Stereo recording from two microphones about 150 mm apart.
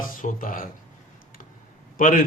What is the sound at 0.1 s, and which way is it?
Speech, 65° left (ahead or behind).